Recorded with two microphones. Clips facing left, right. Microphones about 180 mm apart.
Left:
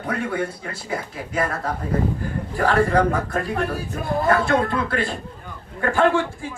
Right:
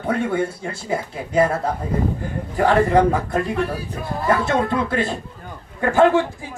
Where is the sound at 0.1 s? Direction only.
25° right (ahead or behind).